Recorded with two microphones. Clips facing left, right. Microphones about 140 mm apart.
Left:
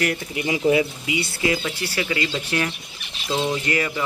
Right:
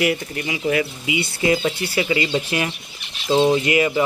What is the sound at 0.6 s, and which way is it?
Speech, 20° left (ahead or behind).